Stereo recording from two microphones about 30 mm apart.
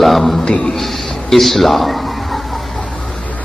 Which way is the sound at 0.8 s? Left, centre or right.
Centre.